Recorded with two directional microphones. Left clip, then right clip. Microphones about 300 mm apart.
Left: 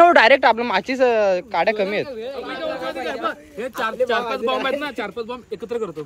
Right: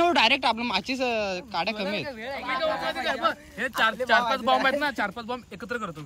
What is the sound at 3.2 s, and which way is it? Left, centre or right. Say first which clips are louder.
Speech: left 1 dB; right.